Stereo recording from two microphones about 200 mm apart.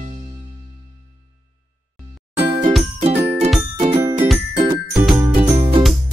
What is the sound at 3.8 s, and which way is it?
Music, 20° right (ahead or behind).